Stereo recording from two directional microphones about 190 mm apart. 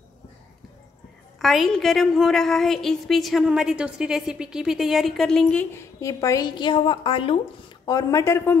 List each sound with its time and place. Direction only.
1.4 s a woman's voice: centre (ahead or behind)